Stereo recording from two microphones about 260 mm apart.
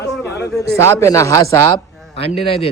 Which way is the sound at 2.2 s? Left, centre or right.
Left.